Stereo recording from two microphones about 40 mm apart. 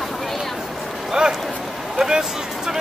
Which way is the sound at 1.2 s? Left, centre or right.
Right.